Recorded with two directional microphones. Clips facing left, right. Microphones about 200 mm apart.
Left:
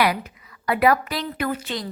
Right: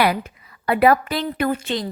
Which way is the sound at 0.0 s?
30° right (ahead or behind).